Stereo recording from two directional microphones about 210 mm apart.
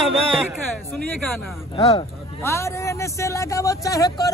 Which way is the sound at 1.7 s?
25° left (ahead or behind).